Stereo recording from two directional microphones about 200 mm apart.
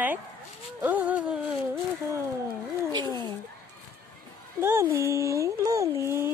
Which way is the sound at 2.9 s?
20° right (ahead or behind).